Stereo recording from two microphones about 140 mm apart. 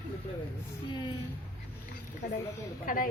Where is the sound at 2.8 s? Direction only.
80° left.